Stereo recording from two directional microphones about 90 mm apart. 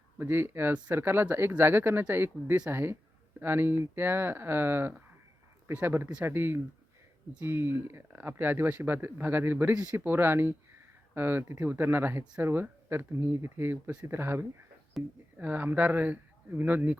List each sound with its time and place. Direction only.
0.2 s speech: 25° right (ahead or behind)
15.0 s speech: centre (ahead or behind)
15.4 s speech: 20° right (ahead or behind)